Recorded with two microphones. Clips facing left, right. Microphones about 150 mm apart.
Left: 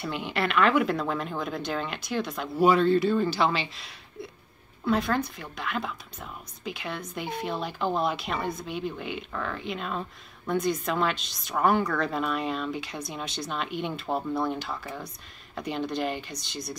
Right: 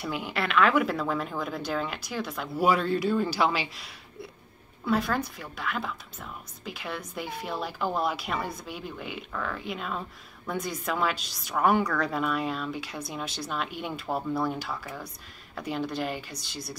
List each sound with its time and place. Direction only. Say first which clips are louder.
0.0 s a woman's voice: left 2 dB; 5° right (ahead or behind)